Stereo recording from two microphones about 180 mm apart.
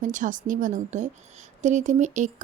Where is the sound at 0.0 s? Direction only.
45° right (ahead or behind).